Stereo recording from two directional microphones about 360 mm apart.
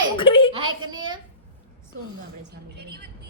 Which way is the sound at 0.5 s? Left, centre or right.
Centre.